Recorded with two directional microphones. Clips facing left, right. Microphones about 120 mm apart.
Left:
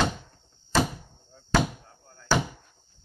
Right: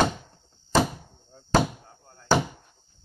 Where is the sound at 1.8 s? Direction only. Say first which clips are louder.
Right 1 dB; 30° right (ahead or behind).